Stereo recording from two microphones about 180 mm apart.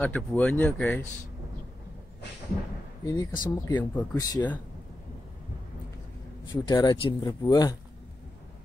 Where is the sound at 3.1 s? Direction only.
15° left (ahead or behind).